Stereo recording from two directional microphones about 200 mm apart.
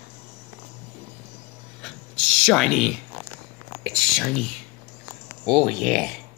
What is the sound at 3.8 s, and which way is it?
Whispering, centre (ahead or behind).